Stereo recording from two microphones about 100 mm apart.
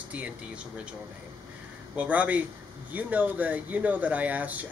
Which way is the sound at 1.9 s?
15° right (ahead or behind).